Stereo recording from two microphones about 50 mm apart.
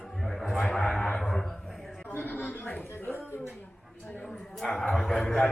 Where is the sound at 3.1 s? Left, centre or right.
Left.